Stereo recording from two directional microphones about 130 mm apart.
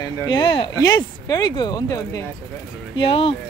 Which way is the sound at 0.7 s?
30° left (ahead or behind).